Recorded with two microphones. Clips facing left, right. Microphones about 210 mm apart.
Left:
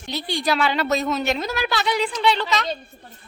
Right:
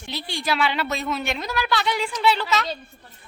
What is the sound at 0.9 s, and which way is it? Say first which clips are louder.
Speech: left 5 dB; 40° left (ahead or behind).